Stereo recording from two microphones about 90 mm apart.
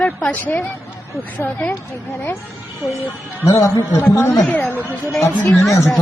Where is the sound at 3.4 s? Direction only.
35° left (ahead or behind).